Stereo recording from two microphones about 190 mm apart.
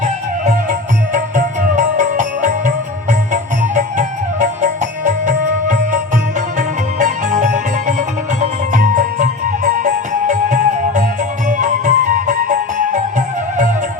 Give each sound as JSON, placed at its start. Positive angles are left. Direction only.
{"t": 0.0, "sound": "music", "side_deg": -45}